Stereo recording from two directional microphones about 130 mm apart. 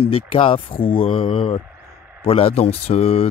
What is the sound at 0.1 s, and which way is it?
Speech, 45° left (ahead or behind).